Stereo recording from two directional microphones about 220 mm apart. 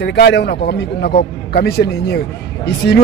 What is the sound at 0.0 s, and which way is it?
A man's voice, 50° left (ahead or behind).